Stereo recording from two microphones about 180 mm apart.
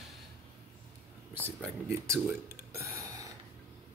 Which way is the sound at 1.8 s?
15° right (ahead or behind).